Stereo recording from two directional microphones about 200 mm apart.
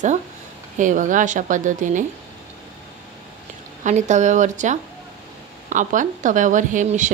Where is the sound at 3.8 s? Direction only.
35° right (ahead or behind).